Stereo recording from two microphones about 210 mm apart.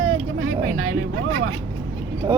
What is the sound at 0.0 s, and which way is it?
Vehicle, 80° right.